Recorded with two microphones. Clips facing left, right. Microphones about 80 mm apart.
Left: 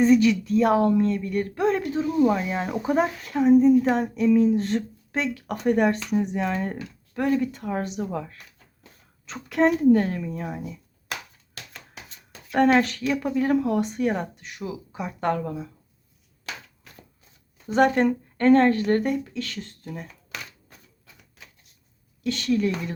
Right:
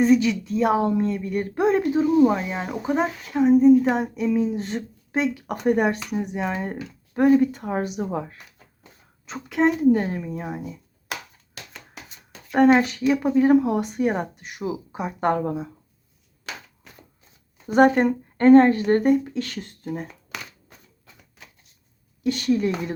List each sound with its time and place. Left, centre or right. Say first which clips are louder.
0.0 s speech: even; centre
7.1 s speech: right 6 dB; right
9.2 s speech: even; centre
11.7 s shuffling cards: right 1 dB; centre
13.1 s speech: right 5 dB; centre
17.7 s speech: right 4 dB; right
17.9 s speech: right 1 dB; centre; by 20.1 s right
22.2 s speech: right 2 dB; right